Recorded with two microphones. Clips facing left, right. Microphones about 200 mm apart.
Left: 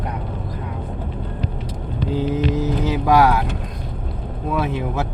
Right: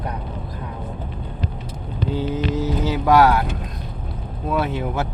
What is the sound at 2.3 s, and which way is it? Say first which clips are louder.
Mantra: left 2 dB; 60° left (ahead or behind).